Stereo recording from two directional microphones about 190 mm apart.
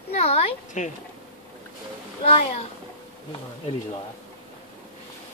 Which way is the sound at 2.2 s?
35° left (ahead or behind).